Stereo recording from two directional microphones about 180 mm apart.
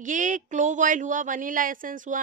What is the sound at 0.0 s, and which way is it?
Speech, 45° right (ahead or behind).